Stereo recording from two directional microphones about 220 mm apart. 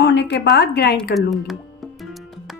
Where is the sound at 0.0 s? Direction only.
50° left (ahead or behind).